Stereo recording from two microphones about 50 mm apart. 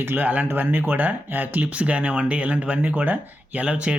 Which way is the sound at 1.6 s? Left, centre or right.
Right.